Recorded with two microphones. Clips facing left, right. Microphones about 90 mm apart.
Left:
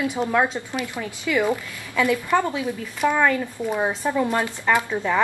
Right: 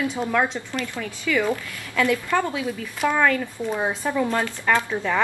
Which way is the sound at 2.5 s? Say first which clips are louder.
Left 1 dB; 5° left (ahead or behind).